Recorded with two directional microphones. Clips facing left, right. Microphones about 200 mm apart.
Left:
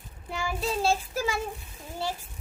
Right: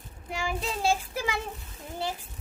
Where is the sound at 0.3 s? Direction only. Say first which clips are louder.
Left 1 dB; 15° right (ahead or behind).